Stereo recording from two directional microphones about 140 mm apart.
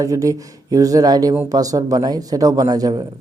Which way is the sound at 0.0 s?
25° right (ahead or behind).